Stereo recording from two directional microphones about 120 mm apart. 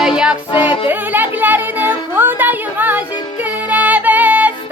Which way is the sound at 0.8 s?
15° right (ahead or behind).